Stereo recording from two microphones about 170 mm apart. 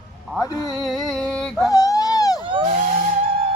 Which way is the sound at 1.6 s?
20° left (ahead or behind).